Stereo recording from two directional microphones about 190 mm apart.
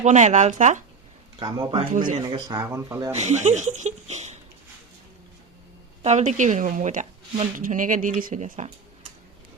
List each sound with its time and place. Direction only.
0.0 s speech: 40° right (ahead or behind)
1.4 s speech: 25° right (ahead or behind)
1.9 s speech: 45° right (ahead or behind)
2.2 s speech: 20° right (ahead or behind)
3.1 s speech: 40° right (ahead or behind)
6.0 s speech: 35° right (ahead or behind)